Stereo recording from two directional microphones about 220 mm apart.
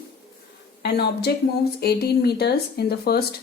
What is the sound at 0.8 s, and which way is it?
Speech, 50° left (ahead or behind).